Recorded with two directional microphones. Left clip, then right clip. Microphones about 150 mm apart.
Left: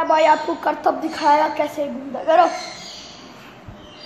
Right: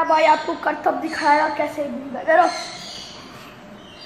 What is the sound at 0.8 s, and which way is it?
Speech, 10° left (ahead or behind).